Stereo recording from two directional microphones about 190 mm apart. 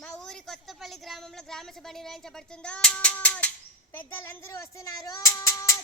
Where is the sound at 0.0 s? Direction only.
5° left (ahead or behind).